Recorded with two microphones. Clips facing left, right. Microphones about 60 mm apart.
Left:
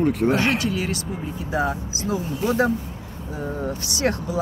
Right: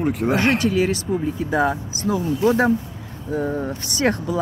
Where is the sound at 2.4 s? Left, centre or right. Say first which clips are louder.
Right 3 dB; right.